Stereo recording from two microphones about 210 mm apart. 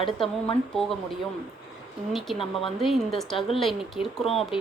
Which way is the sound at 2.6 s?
Centre (ahead or behind).